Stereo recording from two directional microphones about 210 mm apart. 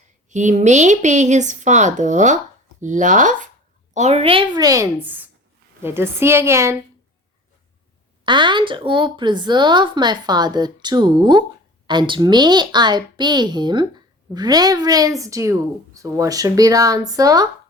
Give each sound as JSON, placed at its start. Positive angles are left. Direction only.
{"t": 0.3, "sound": "a child's voice", "side_deg": -35}
{"t": 8.2, "sound": "a child's voice", "side_deg": -20}